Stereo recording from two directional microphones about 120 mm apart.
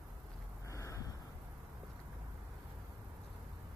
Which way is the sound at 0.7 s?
25° left (ahead or behind).